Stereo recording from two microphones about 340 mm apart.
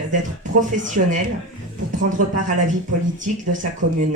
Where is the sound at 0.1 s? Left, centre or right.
Right.